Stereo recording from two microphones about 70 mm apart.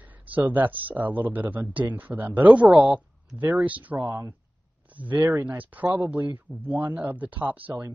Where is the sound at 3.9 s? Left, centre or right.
Right.